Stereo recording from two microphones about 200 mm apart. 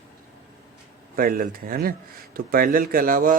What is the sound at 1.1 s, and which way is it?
Speech, 45° right (ahead or behind).